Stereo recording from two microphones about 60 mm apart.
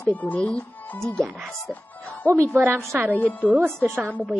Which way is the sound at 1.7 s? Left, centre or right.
Left.